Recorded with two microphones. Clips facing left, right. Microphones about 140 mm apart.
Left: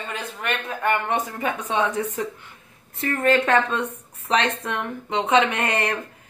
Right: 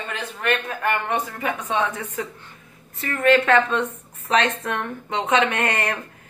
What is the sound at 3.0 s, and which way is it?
A woman's voice, 30° left (ahead or behind).